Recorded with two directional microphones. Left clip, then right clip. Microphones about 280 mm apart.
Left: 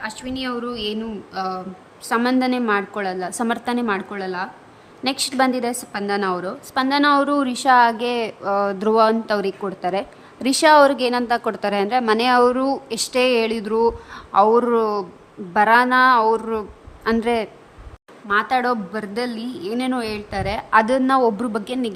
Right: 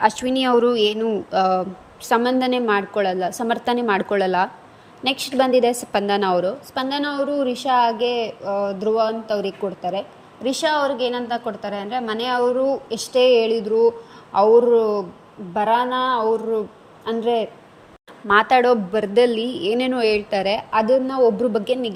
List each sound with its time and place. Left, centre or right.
0.0 s a woman's voice: centre
9.4 s a woman's voice: left
9.9 s a woman's voice: centre
16.0 s a man's voice: left
18.3 s a woman's voice: centre